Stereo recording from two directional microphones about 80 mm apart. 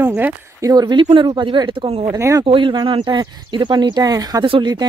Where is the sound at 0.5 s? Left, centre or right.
Right.